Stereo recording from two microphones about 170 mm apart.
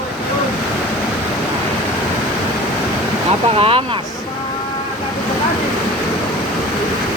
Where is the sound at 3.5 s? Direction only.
35° right (ahead or behind).